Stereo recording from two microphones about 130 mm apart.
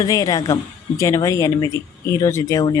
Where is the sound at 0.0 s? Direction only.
25° left (ahead or behind).